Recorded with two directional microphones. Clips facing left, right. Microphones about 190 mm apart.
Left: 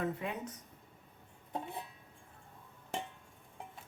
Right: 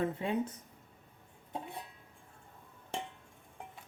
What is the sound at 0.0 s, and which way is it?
Speech, 30° right (ahead or behind).